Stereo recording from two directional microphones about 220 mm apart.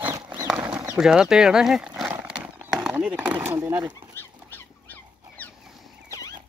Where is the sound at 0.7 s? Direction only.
15° right (ahead or behind).